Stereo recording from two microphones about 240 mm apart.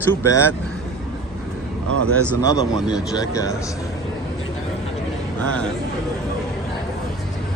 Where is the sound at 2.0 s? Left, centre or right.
Right.